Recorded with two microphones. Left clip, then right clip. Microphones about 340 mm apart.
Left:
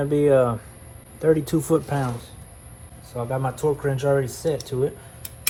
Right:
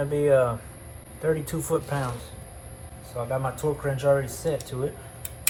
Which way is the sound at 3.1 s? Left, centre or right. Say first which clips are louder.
Left 2 dB; centre.